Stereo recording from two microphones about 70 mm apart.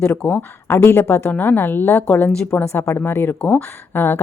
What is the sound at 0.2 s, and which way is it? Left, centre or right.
Speech, left.